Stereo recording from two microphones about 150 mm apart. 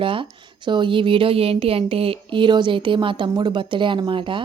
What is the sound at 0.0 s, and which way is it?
Speech, 35° right (ahead or behind).